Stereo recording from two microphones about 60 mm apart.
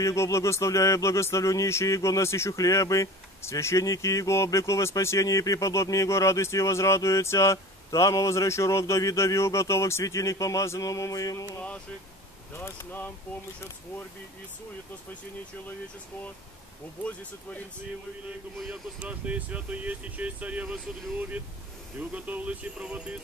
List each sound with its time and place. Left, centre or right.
0.0 s speech: left
2.5 s speech: left
3.8 s speech: left
7.5 s speech: left
10.0 s speech: left
10.9 s music: left
12.5 s speech: left
18.7 s speech: right